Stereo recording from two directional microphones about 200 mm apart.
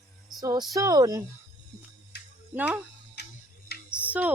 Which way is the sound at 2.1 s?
55° left (ahead or behind).